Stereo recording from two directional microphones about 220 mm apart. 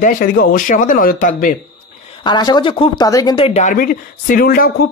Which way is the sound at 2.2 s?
20° left (ahead or behind).